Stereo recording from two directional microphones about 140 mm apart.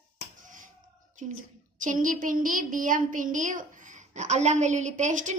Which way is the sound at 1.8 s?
70° right (ahead or behind).